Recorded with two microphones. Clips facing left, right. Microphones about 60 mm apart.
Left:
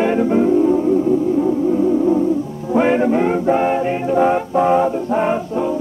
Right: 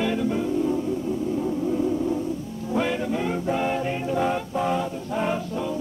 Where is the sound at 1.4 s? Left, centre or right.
Left.